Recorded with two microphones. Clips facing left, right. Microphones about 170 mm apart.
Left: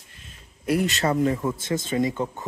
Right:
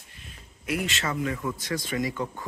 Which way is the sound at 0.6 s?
40° left (ahead or behind).